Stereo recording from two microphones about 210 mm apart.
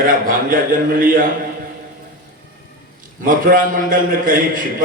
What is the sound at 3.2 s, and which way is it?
A man's voice, 40° right (ahead or behind).